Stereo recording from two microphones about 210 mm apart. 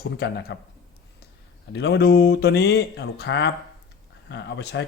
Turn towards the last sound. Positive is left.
turn(degrees=55)  # may be behind; listen again after turning